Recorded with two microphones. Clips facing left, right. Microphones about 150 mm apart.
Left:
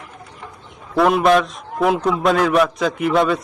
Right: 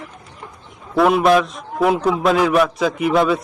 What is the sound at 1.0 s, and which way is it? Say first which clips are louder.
A man's voice: right 1 dB; centre (ahead or behind).